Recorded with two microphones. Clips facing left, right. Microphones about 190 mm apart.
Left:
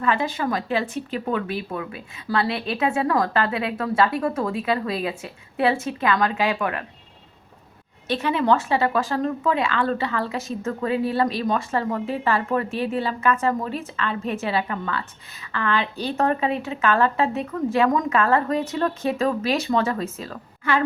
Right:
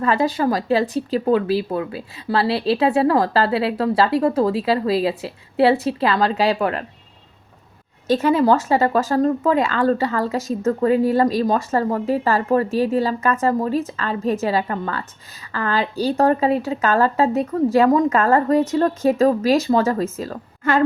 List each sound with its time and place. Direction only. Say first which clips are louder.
0.0 s speech: right 5 dB; 40° right (ahead or behind)
8.0 s speech: right 6 dB; 40° right (ahead or behind)